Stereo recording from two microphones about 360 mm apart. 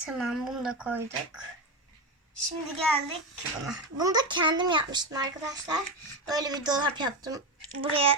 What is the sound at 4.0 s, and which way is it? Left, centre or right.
A child's voice, centre.